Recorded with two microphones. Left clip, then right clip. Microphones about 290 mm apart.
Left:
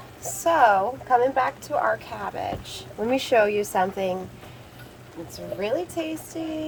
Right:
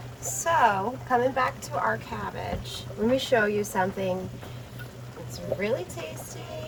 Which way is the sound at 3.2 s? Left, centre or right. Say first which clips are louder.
Left 6 dB; left.